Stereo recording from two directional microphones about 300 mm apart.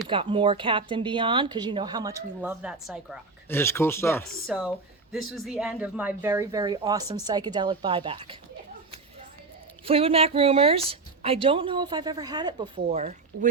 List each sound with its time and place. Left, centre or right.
0.1 s speech: centre
9.8 s a woman's voice: centre